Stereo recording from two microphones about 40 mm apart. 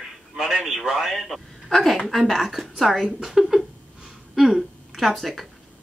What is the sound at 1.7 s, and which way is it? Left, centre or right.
Speech, centre.